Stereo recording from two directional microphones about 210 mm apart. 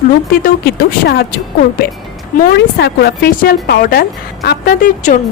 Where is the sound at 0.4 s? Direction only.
50° left (ahead or behind).